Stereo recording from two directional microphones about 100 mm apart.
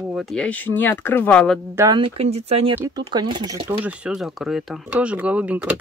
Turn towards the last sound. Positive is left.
turn(degrees=-15)  # may be behind; listen again after turning